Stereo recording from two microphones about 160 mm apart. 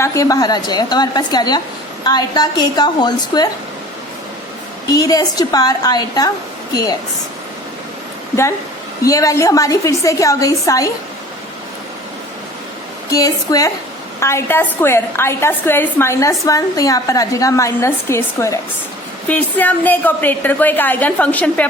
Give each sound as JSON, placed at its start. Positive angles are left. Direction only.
{"t": 0.0, "sound": "a woman's voice", "side_deg": 20}
{"t": 4.9, "sound": "a woman's voice", "side_deg": 25}
{"t": 9.0, "sound": "a woman's voice", "side_deg": 20}
{"t": 13.1, "sound": "a woman's voice", "side_deg": 20}